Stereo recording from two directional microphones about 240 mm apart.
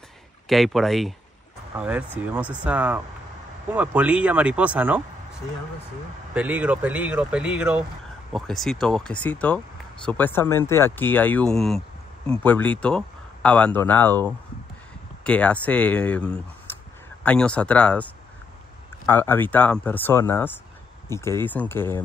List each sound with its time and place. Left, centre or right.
0.5 s speech: centre
6.3 s speech: centre
15.2 s speech: centre